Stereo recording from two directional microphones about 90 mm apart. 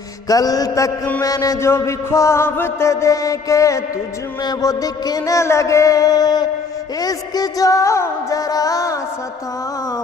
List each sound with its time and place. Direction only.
0.3 s mantra: 45° left (ahead or behind)
1.7 s mantra: 30° left (ahead or behind)